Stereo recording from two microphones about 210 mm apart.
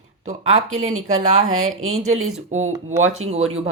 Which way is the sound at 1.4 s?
75° right (ahead or behind).